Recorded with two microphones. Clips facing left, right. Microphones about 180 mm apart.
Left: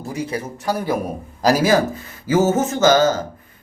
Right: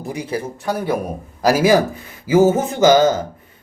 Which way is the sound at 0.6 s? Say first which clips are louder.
Even; centre (ahead or behind).